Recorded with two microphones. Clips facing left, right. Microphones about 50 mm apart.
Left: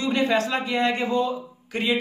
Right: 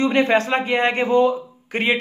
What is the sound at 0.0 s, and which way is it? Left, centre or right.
A man's voice, right.